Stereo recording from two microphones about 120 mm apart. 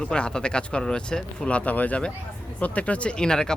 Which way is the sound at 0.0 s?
10° left (ahead or behind).